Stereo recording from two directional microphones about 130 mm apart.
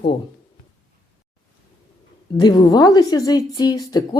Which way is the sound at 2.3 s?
30° left (ahead or behind).